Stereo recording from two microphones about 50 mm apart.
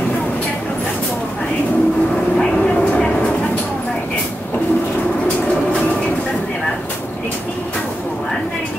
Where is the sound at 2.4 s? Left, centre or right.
Left.